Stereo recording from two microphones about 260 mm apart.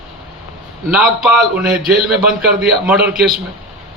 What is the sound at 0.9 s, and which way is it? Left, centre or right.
Speech, centre.